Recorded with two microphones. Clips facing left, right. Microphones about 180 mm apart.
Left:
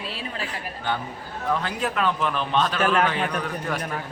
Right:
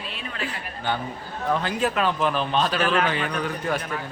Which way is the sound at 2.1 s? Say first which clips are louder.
Right 1 dB; 30° right (ahead or behind).